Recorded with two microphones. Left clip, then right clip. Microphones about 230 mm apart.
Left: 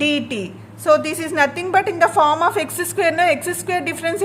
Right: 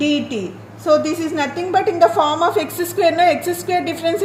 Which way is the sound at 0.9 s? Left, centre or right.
Left.